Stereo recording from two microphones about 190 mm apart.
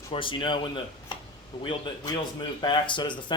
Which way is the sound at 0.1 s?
25° left (ahead or behind).